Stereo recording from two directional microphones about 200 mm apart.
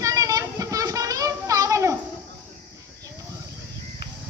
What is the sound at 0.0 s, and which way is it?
Children playing, 15° right (ahead or behind).